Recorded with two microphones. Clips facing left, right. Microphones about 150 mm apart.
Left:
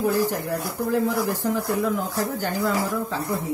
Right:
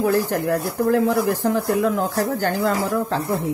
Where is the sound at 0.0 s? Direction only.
70° right (ahead or behind).